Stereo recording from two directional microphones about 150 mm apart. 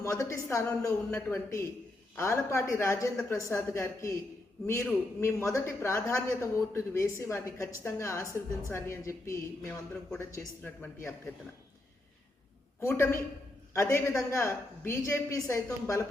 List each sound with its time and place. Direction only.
0.0 s a man's voice: 20° left (ahead or behind)
12.8 s a man's voice: 20° left (ahead or behind)